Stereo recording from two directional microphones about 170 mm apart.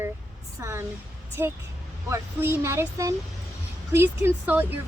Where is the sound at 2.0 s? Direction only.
15° right (ahead or behind).